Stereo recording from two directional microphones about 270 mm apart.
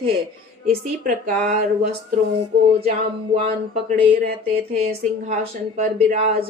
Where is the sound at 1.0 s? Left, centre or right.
Right.